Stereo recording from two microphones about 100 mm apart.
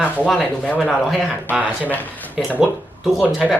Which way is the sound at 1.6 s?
15° left (ahead or behind).